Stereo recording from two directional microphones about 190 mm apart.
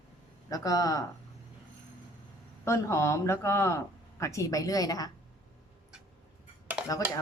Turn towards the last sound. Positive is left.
turn(degrees=-5)  # may be behind; listen again after turning